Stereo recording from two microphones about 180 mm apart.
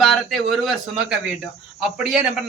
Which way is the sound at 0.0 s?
Centre (ahead or behind).